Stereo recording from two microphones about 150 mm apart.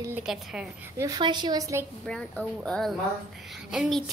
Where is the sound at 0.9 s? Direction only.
25° right (ahead or behind).